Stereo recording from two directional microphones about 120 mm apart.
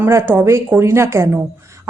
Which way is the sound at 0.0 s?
20° right (ahead or behind).